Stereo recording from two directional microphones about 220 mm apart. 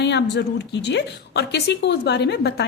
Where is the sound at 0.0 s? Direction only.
50° left (ahead or behind).